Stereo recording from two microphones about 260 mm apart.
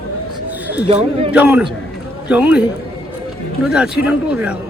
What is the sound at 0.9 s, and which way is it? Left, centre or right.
Speech, right.